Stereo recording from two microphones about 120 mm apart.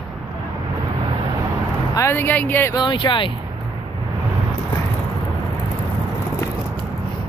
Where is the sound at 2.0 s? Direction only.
20° left (ahead or behind).